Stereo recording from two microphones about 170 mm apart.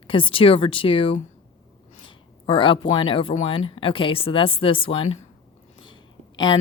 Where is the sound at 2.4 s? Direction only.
30° left (ahead or behind).